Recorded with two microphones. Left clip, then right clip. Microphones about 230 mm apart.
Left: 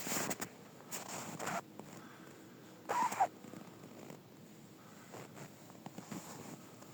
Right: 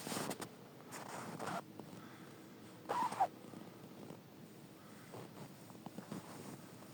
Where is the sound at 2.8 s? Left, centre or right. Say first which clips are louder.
Left 3 dB; left.